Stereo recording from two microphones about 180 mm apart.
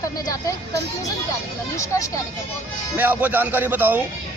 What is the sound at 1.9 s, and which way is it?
Speech, 15° left (ahead or behind).